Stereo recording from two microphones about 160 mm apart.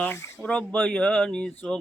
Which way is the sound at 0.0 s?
15° left (ahead or behind).